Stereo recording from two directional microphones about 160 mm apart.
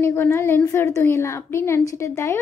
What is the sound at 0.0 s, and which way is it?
Speech, 15° left (ahead or behind).